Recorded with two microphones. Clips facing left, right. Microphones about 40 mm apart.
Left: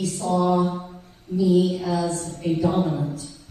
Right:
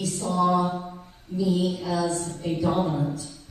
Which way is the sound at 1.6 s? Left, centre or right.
Centre.